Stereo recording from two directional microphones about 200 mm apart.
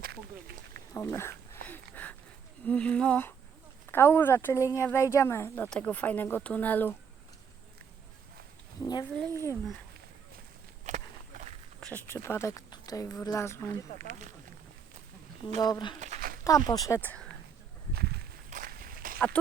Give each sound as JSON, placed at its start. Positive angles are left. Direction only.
{"t": 0.0, "sound": "a sound", "side_deg": -50}
{"t": 0.9, "sound": "a sound", "side_deg": 15}
{"t": 2.6, "sound": "speech", "side_deg": 5}
{"t": 8.8, "sound": "speech", "side_deg": 20}
{"t": 10.8, "sound": "walk", "side_deg": -35}
{"t": 11.8, "sound": "speech", "side_deg": 10}
{"t": 14.0, "sound": "speech", "side_deg": -35}
{"t": 15.6, "sound": "speech", "side_deg": 20}
{"t": 16.0, "sound": "a sound", "side_deg": -35}
{"t": 16.4, "sound": "speech", "side_deg": 20}
{"t": 17.9, "sound": "walk", "side_deg": -50}